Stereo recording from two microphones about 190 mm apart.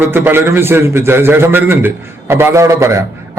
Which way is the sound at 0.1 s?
10° right (ahead or behind).